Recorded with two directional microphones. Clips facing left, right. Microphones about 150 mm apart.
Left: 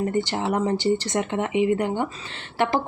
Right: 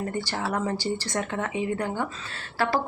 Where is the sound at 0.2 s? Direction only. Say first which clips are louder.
Left 5 dB; 20° left (ahead or behind).